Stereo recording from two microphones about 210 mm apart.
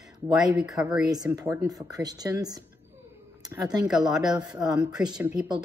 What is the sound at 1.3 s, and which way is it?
Speech, 15° right (ahead or behind).